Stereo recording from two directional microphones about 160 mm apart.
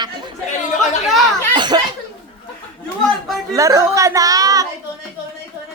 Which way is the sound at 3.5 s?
20° right (ahead or behind).